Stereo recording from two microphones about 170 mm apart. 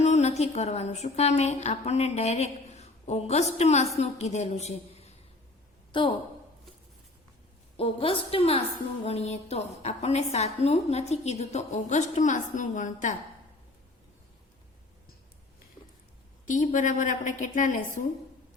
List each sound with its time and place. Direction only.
0.0 s a woman's voice: 40° left (ahead or behind)
5.9 s a woman's voice: 30° left (ahead or behind)
7.8 s a woman's voice: 35° left (ahead or behind)
16.5 s a woman's voice: 50° left (ahead or behind)